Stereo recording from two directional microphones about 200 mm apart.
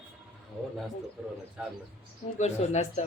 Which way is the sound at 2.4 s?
35° left (ahead or behind).